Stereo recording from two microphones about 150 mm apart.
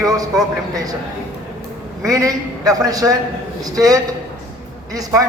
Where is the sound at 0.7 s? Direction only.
25° right (ahead or behind).